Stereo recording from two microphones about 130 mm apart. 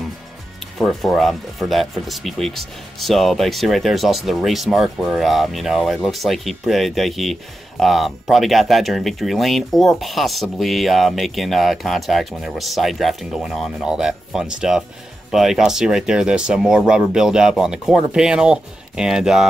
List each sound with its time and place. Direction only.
0.7 s speech: centre (ahead or behind)